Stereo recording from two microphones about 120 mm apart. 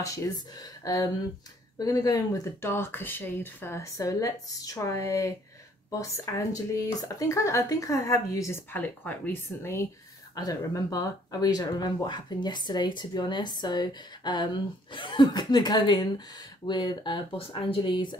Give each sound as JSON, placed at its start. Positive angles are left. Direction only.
{"t": 0.0, "sound": "speech", "side_deg": 25}
{"t": 10.3, "sound": "speech", "side_deg": 30}